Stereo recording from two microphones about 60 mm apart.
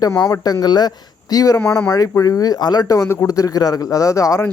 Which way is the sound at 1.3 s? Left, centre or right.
Left.